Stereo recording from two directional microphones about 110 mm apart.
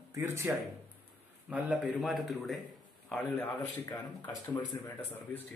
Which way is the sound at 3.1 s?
15° left (ahead or behind).